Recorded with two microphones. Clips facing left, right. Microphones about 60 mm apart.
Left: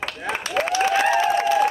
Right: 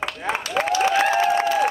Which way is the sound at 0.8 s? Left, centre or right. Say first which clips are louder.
Even; right.